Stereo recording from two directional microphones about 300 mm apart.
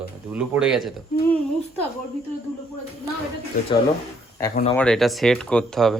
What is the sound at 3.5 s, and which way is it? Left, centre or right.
Speech, left.